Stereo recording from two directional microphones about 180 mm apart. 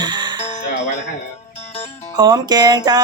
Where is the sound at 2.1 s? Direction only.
20° right (ahead or behind).